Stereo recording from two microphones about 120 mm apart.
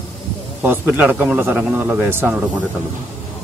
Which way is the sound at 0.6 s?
15° right (ahead or behind).